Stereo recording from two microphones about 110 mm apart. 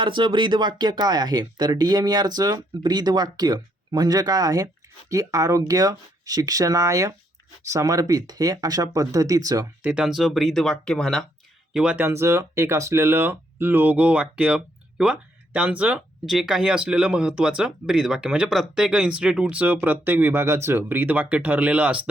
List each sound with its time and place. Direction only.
0.0 s speech: 50° right (ahead or behind)
9.8 s speech: 10° right (ahead or behind)
11.7 s speech: 10° right (ahead or behind)
12.0 s speech: 25° right (ahead or behind)